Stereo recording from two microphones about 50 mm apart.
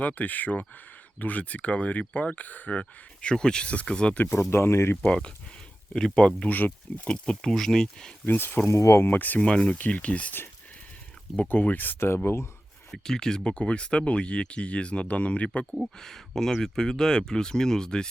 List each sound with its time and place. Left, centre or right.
0.0 s speech: left; by 4.1 s centre
4.3 s speech: left
5.0 s speech: centre
6.5 s speech: left
7.4 s speech: centre
8.3 s speech: left
8.6 s speech: left
9.0 s speech: left
9.4 s speech: left
9.7 s speech: left
11.4 s speech: left
12.0 s speech: left
12.9 s speech: centre; by 15.4 s left
16.0 s speech: centre